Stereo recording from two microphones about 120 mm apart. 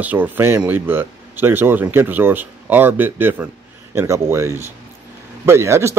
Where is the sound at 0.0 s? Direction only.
15° right (ahead or behind).